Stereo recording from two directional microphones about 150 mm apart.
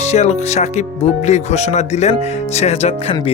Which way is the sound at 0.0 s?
45° left (ahead or behind).